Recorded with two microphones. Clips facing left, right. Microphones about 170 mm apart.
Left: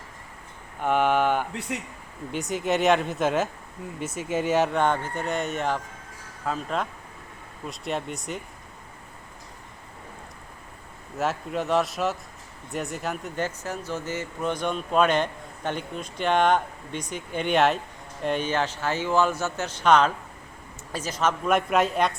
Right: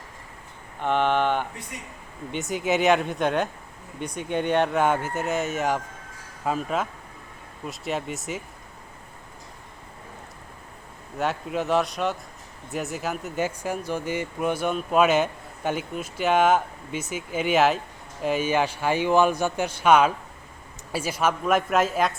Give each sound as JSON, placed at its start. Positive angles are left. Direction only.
{"t": 0.8, "sound": "speech", "side_deg": 5}
{"t": 1.7, "sound": "a man's voice", "side_deg": 80}
{"t": 2.3, "sound": "speech", "side_deg": 0}
{"t": 4.8, "sound": "speech", "side_deg": -10}
{"t": 11.2, "sound": "speech", "side_deg": 0}